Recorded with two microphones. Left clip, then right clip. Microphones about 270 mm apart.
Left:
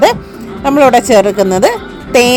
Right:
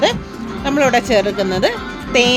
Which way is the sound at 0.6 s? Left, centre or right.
Centre.